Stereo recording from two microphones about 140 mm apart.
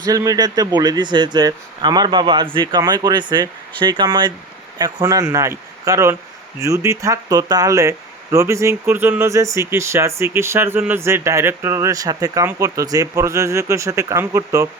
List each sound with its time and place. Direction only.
0.0 s speech: 25° right (ahead or behind)